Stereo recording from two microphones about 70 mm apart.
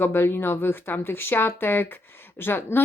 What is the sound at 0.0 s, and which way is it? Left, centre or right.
A woman's voice, left.